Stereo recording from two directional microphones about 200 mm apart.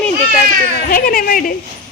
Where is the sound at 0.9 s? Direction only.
45° left (ahead or behind).